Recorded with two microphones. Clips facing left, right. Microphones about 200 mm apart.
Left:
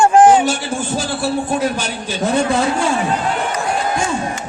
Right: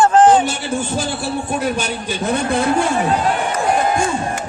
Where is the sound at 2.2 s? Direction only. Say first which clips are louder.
Left 2 dB; 55° right (ahead or behind).